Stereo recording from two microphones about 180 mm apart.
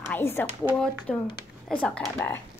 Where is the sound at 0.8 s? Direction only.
10° left (ahead or behind).